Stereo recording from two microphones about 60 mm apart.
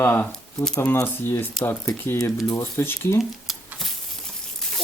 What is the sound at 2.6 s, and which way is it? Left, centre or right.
Speech, left.